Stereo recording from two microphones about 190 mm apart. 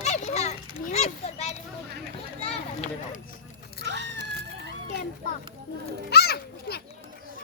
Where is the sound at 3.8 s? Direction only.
65° right (ahead or behind).